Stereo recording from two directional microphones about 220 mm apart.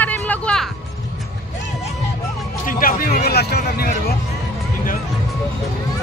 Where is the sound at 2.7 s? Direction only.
40° left (ahead or behind).